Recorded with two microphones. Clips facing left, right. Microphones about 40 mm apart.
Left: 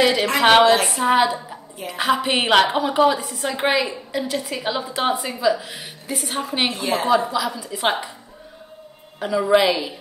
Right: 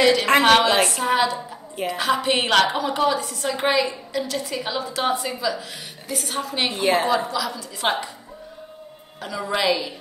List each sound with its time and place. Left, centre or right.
0.0 s a woman's voice: centre
6.7 s a woman's voice: right
7.1 s a woman's voice: centre
9.2 s a woman's voice: centre